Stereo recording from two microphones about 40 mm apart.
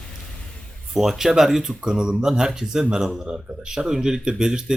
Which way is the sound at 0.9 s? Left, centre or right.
Centre.